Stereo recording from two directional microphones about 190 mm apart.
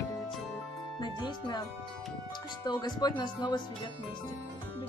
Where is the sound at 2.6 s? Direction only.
25° left (ahead or behind).